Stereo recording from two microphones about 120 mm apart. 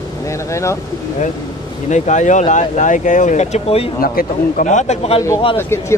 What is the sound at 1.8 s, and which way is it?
Speech, 80° left.